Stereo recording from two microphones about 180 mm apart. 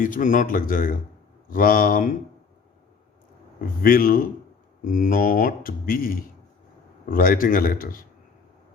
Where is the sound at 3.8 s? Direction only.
50° left (ahead or behind).